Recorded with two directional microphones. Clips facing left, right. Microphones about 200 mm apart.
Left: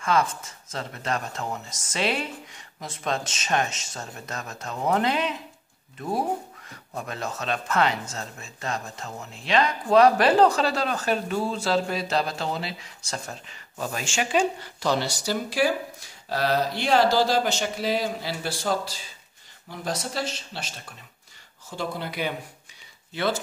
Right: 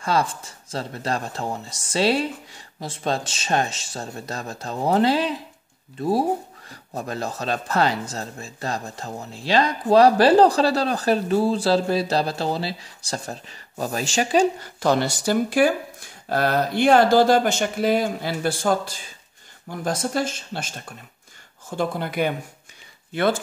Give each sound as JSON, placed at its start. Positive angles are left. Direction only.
{"t": 0.0, "sound": "speech", "side_deg": -35}
{"t": 14.8, "sound": "speech", "side_deg": -50}